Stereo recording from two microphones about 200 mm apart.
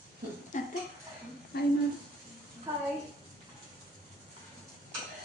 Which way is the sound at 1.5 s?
50° left (ahead or behind).